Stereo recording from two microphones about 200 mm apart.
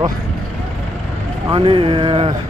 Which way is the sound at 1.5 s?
25° right (ahead or behind).